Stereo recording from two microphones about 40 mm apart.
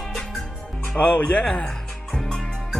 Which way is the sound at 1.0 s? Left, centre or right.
Left.